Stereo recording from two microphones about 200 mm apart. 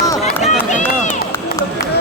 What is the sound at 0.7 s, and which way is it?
Run, 40° left (ahead or behind).